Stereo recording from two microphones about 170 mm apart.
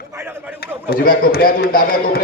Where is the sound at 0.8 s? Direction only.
60° left (ahead or behind).